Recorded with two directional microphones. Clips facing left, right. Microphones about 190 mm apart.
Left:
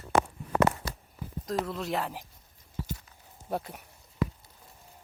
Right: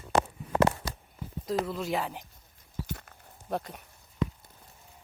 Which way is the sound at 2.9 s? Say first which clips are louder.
Even; 60° right (ahead or behind).